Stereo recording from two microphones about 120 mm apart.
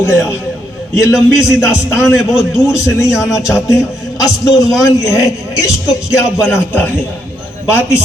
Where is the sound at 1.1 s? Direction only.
5° right (ahead or behind).